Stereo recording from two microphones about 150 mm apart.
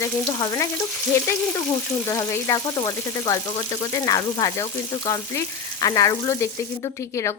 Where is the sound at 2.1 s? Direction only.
20° left (ahead or behind).